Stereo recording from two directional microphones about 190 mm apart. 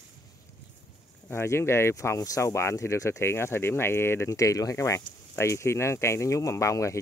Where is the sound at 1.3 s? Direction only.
15° left (ahead or behind).